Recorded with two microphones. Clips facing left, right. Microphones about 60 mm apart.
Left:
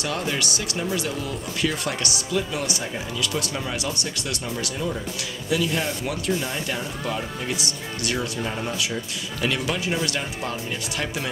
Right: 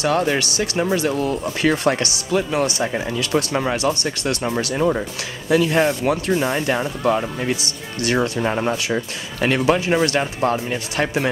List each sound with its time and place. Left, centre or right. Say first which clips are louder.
0.0 s speech: right 8 dB; right